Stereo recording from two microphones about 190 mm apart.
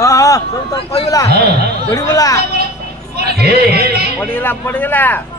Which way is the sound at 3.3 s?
55° right (ahead or behind).